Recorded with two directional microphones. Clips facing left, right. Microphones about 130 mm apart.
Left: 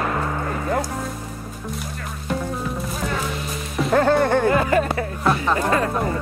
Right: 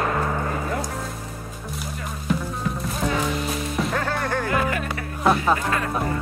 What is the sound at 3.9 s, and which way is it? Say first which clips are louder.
Music: left 8 dB; 30° left (ahead or behind).